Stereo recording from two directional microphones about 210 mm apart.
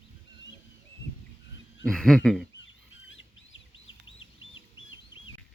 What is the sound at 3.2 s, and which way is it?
Bird, 70° left (ahead or behind).